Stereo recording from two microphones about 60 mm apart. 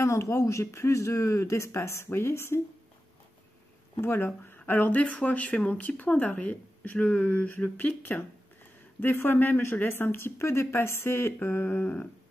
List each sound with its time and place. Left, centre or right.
0.0 s speech: left
4.0 s speech: left